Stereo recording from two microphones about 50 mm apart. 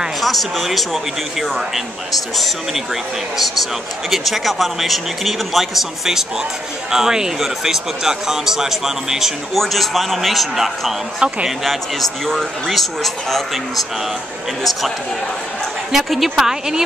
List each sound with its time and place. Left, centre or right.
0.2 s a man's voice: centre
11.1 s speech: centre
11.6 s a man's voice: centre
15.9 s a man's voice: centre